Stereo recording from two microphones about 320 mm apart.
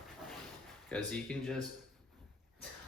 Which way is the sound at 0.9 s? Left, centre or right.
Centre.